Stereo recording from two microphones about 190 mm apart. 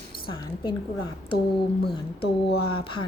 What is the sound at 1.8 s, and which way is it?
Speech, 60° left (ahead or behind).